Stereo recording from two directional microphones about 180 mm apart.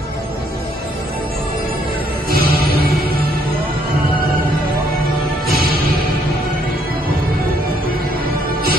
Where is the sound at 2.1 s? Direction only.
55° right (ahead or behind).